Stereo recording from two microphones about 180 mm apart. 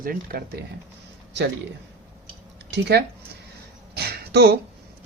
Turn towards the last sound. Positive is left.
turn(degrees=-65)  # may be behind; listen again after turning